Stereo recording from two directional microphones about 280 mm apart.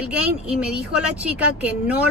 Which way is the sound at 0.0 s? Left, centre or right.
Centre.